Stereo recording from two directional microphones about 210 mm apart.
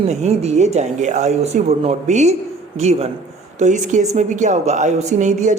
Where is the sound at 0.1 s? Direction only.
30° right (ahead or behind).